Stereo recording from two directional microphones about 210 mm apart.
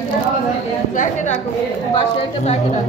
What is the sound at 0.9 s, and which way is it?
Speech, 35° left (ahead or behind).